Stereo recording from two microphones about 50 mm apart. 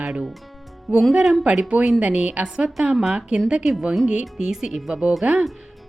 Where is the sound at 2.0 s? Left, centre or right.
Right.